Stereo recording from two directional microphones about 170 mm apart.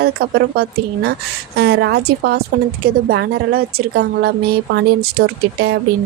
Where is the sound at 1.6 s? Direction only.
85° right.